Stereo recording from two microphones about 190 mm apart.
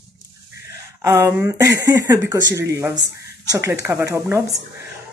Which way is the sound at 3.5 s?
15° right (ahead or behind).